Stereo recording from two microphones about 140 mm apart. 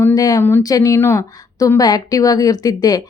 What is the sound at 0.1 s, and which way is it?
A woman's voice, 25° left (ahead or behind).